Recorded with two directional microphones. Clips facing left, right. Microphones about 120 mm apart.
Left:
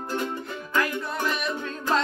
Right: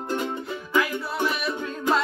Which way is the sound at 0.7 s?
10° right (ahead or behind).